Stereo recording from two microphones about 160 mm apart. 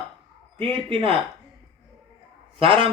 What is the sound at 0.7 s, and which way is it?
Speech, 35° right (ahead or behind).